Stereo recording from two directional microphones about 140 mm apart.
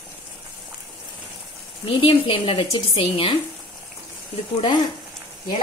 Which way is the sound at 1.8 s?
40° left (ahead or behind).